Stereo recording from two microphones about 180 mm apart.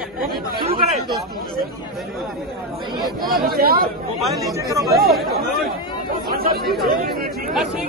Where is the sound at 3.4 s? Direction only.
55° right (ahead or behind).